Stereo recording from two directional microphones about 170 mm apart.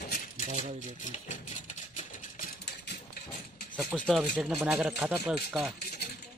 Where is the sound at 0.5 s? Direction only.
45° right (ahead or behind).